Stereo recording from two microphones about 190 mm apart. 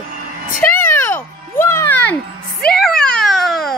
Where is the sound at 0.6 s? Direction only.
10° left (ahead or behind).